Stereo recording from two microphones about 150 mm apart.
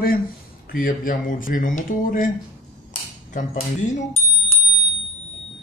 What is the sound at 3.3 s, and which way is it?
Speech, 60° left (ahead or behind).